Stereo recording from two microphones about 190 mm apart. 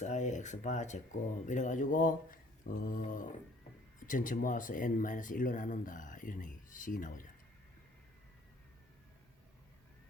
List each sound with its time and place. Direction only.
0.0 s speech: 40° left (ahead or behind)